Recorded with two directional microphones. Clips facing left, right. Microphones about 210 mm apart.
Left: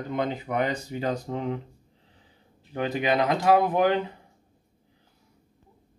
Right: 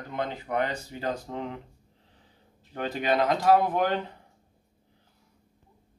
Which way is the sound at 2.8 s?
10° left (ahead or behind).